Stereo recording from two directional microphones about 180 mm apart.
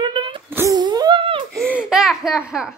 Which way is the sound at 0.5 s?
15° right (ahead or behind).